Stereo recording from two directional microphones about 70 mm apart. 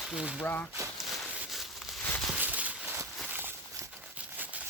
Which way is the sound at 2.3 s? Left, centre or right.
Right.